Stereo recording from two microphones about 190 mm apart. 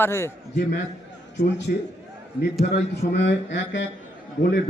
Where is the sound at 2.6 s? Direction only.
65° left (ahead or behind).